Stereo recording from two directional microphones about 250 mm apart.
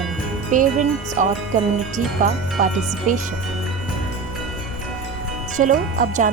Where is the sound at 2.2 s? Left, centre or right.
Right.